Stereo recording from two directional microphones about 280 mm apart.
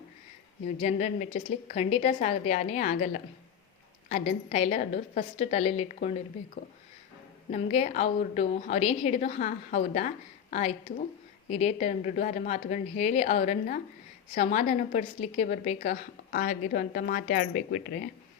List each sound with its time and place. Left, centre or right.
0.8 s a woman's voice: left
7.5 s a woman's voice: left